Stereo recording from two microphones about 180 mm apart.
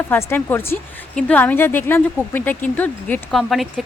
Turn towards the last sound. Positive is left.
turn(degrees=0)  # may be behind; listen again after turning